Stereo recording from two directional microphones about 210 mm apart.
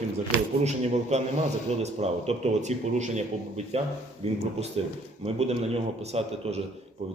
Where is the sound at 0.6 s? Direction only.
30° right (ahead or behind).